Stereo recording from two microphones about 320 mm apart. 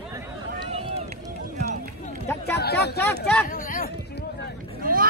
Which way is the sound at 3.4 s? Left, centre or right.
Left.